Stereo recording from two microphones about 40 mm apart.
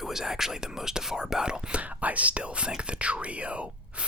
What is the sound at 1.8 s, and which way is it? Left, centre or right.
Speech, right.